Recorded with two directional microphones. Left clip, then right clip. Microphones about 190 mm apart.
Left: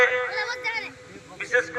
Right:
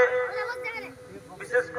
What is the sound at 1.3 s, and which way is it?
Speech, 35° right (ahead or behind).